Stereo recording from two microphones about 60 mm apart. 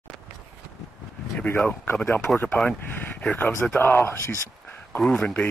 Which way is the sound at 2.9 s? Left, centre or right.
Left.